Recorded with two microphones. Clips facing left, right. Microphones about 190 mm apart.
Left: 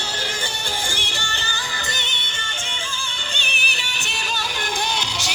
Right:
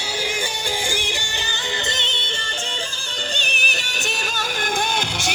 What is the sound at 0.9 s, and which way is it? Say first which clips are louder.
Music: right 3 dB; 15° right (ahead or behind).